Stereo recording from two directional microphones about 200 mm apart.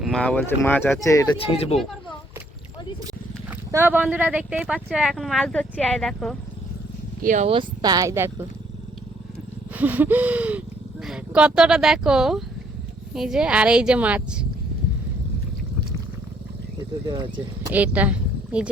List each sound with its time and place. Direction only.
0.0 s speech: 5° left (ahead or behind)
1.5 s speech: 30° left (ahead or behind)
3.7 s speech: 10° right (ahead or behind)
7.2 s speech: 40° right (ahead or behind)
7.4 s speech: 25° right (ahead or behind)
9.7 s gasp: 10° right (ahead or behind)
11.0 s speech: 5° right (ahead or behind)
17.1 s speech: 25° right (ahead or behind)
17.7 s speech: 10° right (ahead or behind)